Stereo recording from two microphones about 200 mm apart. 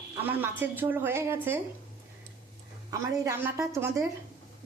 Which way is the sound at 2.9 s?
15° right (ahead or behind).